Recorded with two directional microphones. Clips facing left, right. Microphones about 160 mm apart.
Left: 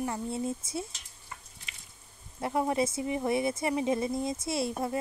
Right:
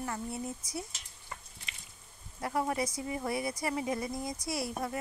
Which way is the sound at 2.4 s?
20° left (ahead or behind).